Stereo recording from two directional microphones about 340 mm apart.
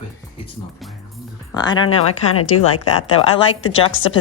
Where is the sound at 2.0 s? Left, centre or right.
Left.